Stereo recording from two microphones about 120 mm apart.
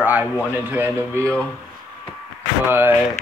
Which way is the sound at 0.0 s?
15° right (ahead or behind).